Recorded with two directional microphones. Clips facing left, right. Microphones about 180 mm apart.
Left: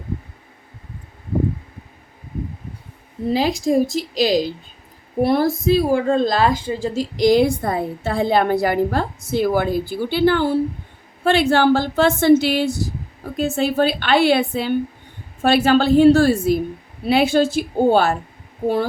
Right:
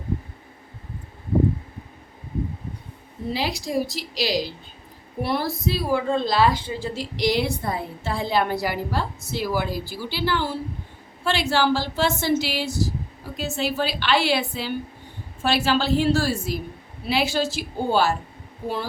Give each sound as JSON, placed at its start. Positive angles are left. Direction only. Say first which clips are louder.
{"t": 3.3, "sound": "a woman's voice", "louder": "left 8 dB", "side_deg": 45}